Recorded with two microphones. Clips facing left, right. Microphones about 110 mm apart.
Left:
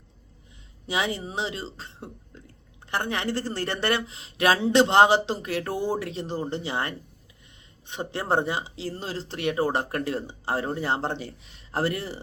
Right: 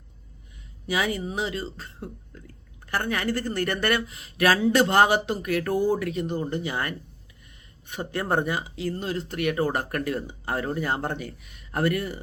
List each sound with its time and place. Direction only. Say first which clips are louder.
0.9 s speech: right 1 dB; 25° left (ahead or behind)